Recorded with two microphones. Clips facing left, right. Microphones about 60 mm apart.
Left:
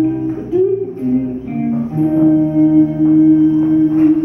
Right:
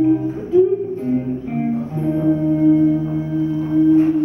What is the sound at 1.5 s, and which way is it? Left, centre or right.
Music, centre.